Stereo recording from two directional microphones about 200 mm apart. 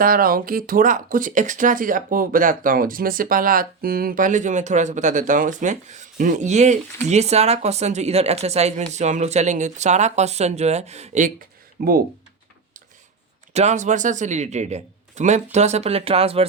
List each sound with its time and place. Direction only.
0.0 s speech: 45° right (ahead or behind)
11.8 s speech: 50° right (ahead or behind)
13.5 s speech: 35° right (ahead or behind)